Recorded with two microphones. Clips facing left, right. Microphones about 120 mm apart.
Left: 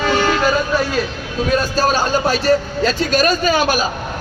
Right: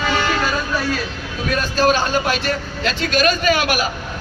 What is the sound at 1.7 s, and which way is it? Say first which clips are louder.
A man's voice: even; 35° left (ahead or behind).